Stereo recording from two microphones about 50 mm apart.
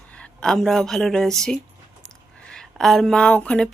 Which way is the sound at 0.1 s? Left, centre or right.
Centre.